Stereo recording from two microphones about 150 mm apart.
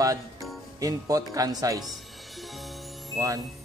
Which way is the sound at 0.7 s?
25° right (ahead or behind).